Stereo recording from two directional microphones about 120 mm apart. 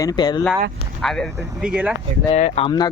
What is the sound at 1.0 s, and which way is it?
Speech, 5° left (ahead or behind).